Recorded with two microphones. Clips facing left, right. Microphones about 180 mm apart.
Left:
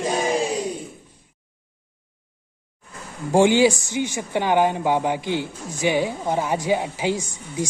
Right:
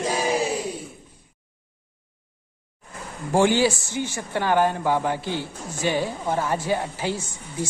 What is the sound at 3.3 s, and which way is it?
Speech, 15° left (ahead or behind).